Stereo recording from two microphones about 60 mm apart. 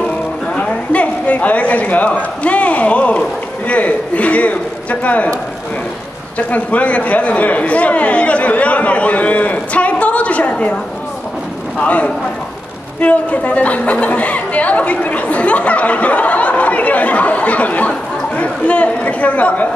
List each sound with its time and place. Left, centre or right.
0.6 s a sound: left
2.4 s a man's voice: left
11.8 s speech: left